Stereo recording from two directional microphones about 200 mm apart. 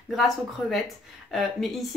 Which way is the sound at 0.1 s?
Centre (ahead or behind).